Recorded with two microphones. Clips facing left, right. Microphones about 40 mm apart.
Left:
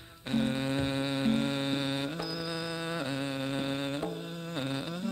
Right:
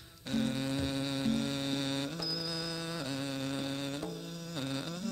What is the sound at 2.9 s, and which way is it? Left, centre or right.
Music, left.